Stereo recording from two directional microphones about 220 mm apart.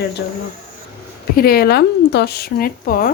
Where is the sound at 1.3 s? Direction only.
45° left (ahead or behind).